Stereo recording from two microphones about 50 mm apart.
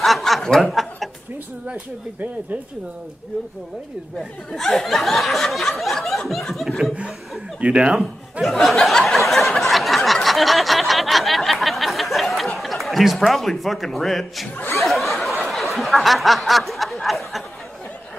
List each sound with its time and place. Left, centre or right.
0.0 s snicker: centre
0.6 s chuckle: centre
4.5 s a sound: centre
7.6 s speech: centre
8.5 s a sound: centre
12.5 s a man's voice: centre
14.8 s snicker: centre